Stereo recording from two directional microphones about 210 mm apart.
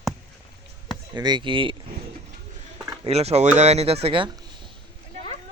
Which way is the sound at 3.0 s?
30° right (ahead or behind).